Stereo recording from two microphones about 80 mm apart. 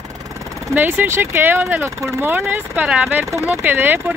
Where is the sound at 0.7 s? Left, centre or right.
Right.